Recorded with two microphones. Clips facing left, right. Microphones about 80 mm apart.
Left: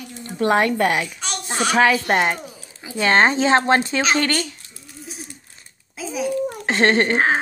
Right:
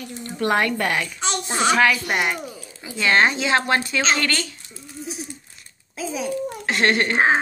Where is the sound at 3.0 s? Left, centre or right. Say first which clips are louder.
Left 3 dB; left.